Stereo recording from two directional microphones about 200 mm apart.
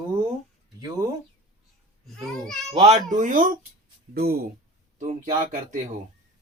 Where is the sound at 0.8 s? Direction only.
20° right (ahead or behind).